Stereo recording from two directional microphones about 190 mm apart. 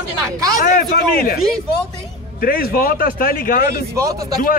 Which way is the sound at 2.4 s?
50° left (ahead or behind).